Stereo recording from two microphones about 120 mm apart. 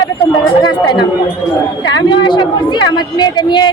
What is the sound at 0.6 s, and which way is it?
Speech, 35° left (ahead or behind).